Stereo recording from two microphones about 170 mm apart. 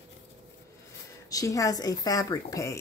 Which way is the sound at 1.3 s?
20° left (ahead or behind).